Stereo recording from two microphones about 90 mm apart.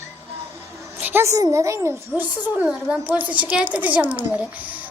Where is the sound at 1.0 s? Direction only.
25° right (ahead or behind).